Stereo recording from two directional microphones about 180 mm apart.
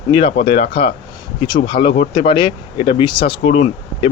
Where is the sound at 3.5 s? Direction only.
40° left (ahead or behind).